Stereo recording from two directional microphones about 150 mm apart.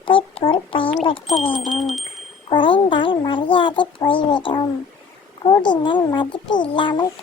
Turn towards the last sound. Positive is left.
turn(degrees=30)  # may be behind; listen again after turning